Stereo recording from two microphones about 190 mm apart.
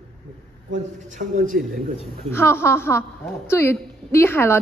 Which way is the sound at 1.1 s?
40° right (ahead or behind).